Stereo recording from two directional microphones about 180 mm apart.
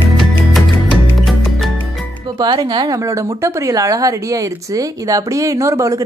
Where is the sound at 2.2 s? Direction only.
25° right (ahead or behind).